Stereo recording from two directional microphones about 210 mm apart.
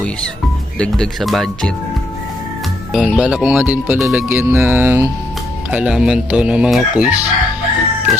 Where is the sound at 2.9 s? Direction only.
Centre (ahead or behind).